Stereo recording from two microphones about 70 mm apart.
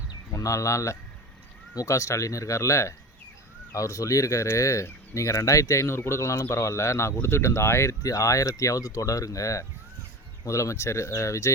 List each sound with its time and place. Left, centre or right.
0.3 s speech: left